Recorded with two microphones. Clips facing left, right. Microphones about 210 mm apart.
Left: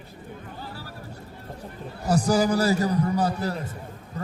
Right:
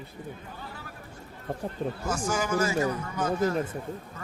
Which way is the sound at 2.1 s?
35° left (ahead or behind).